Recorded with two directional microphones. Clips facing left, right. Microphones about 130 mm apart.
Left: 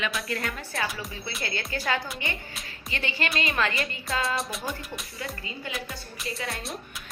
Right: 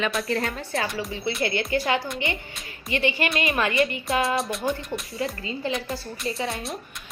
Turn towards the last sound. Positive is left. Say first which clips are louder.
# right 6 dB
turn(degrees=-25)  # may be behind; listen again after turning